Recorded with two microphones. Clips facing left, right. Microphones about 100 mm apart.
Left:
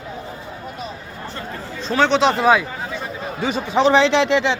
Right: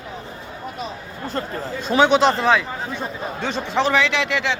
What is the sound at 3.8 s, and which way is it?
Speech, 30° left (ahead or behind).